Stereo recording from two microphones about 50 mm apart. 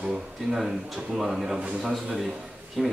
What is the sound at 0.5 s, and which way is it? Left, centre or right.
Speech, centre.